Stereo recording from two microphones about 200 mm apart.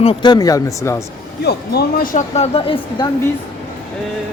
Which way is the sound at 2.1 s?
35° left (ahead or behind).